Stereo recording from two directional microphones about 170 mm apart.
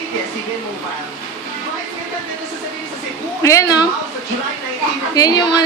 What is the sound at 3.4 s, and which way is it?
Speech, 20° left (ahead or behind).